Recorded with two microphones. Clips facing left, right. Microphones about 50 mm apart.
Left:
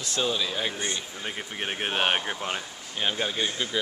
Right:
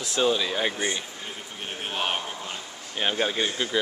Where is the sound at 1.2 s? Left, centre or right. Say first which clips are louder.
Left 4 dB; left.